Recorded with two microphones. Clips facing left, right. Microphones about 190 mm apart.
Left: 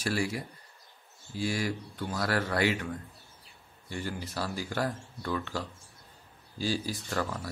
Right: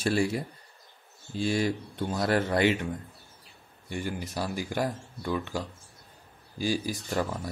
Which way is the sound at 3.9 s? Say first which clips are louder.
Right 3 dB; 15° right (ahead or behind).